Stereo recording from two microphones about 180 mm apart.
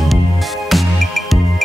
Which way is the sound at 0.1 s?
Centre (ahead or behind).